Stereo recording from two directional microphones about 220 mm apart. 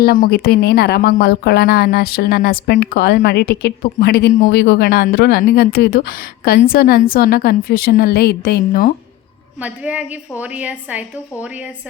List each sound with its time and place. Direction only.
0.0 s speech: 45° left (ahead or behind)
9.6 s a woman's voice: 5° right (ahead or behind)